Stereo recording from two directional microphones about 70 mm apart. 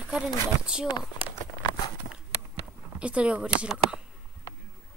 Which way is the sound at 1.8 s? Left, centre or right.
Left.